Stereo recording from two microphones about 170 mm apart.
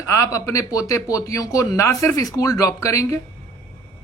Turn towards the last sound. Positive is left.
turn(degrees=20)  # may be behind; listen again after turning